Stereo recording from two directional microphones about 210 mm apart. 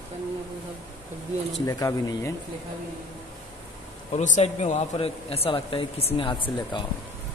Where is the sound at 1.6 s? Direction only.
15° left (ahead or behind).